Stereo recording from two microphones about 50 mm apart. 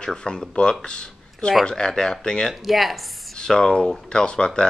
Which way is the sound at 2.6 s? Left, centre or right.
Centre.